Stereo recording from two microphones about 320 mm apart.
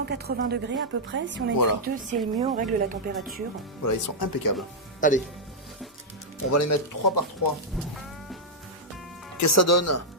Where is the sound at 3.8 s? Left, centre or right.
Left.